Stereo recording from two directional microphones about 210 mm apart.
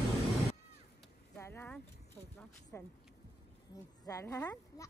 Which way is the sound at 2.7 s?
10° left (ahead or behind).